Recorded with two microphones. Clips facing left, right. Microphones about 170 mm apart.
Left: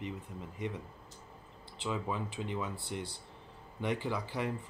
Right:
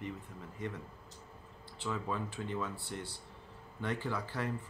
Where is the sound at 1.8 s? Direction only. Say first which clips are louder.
Left 1 dB; 15° left (ahead or behind).